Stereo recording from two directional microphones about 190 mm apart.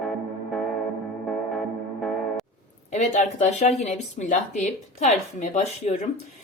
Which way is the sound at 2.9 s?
40° left (ahead or behind).